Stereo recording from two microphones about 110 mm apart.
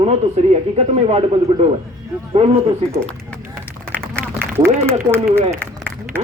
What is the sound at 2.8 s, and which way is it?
Speech, 65° right (ahead or behind).